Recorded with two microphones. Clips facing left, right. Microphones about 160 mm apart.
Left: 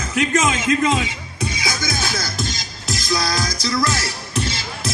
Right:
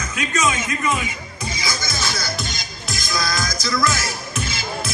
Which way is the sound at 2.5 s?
35° left (ahead or behind).